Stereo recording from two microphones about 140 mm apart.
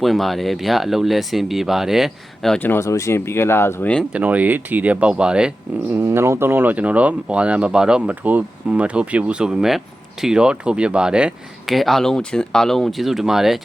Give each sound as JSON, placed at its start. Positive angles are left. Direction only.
{"t": 0.0, "sound": "speech", "side_deg": 0}
{"t": 2.6, "sound": "speech", "side_deg": 20}
{"t": 4.1, "sound": "speech", "side_deg": -10}
{"t": 5.9, "sound": "speech", "side_deg": -15}